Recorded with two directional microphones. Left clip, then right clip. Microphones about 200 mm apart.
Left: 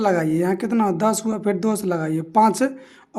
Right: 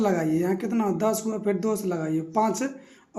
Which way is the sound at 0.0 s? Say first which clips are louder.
Left 5 dB; 40° left (ahead or behind).